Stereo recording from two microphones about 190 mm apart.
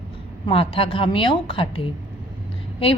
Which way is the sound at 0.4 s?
30° left (ahead or behind).